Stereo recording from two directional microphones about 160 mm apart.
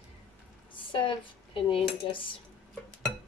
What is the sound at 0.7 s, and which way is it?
A woman's voice, 30° left (ahead or behind).